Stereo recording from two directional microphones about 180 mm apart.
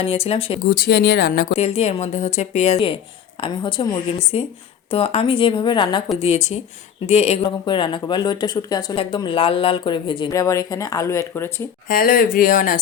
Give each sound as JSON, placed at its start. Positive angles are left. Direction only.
{"t": 0.0, "sound": "a woman's voice", "side_deg": 35}
{"t": 0.7, "sound": "speech", "side_deg": 60}
{"t": 1.5, "sound": "a woman's voice", "side_deg": 35}
{"t": 6.1, "sound": "a woman's voice", "side_deg": 35}
{"t": 7.4, "sound": "speech", "side_deg": 25}
{"t": 11.9, "sound": "speech", "side_deg": 50}